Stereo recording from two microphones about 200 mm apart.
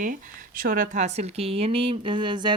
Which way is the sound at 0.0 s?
45° right (ahead or behind).